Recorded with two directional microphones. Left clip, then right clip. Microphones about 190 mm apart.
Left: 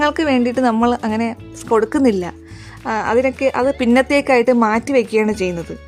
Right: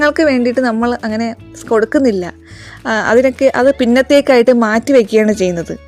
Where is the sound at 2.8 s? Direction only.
20° right (ahead or behind).